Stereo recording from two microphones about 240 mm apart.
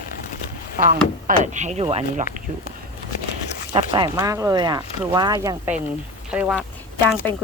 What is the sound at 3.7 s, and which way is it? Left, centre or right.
Speech, centre.